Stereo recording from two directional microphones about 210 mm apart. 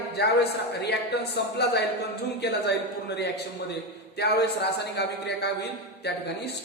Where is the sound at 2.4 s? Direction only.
50° left (ahead or behind).